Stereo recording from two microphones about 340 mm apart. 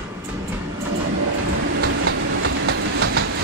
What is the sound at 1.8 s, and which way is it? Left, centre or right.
Train, right.